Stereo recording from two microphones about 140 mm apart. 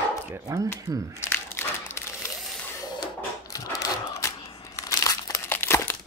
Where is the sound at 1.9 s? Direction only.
20° left (ahead or behind).